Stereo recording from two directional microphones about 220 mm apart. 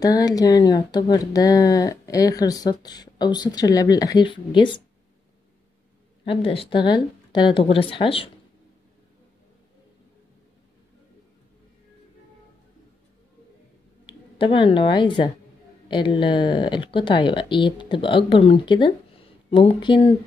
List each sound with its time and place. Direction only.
0.0 s speech: 15° left (ahead or behind)
6.2 s speech: 25° left (ahead or behind)
14.0 s speech: 25° left (ahead or behind)